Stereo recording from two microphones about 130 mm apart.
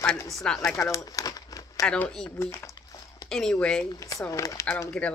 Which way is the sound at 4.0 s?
25° left (ahead or behind).